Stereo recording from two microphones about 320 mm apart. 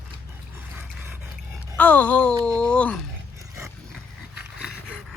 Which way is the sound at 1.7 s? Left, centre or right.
Centre.